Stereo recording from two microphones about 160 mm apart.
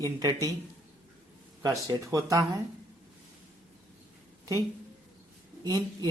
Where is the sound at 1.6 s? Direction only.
20° right (ahead or behind).